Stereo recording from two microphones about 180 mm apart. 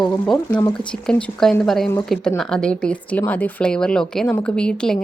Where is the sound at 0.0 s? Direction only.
5° left (ahead or behind).